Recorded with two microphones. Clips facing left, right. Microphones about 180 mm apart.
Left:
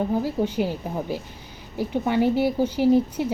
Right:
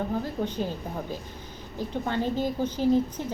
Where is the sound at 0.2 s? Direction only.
10° left (ahead or behind).